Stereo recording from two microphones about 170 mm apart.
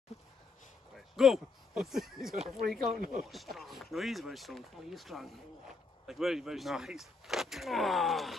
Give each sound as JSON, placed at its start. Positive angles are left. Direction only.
{"t": 1.1, "sound": "speech", "side_deg": 0}
{"t": 3.0, "sound": "speech", "side_deg": -55}
{"t": 3.3, "sound": "speech", "side_deg": 0}